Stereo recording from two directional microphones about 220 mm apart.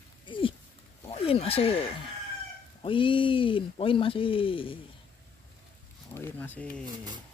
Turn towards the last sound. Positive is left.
turn(degrees=10)  # may be behind; listen again after turning